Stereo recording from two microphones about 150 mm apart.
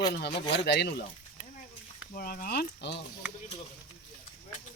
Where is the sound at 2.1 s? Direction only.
70° left (ahead or behind).